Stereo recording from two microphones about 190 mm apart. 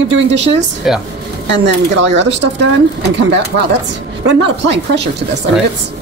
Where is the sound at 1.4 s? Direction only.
70° right (ahead or behind).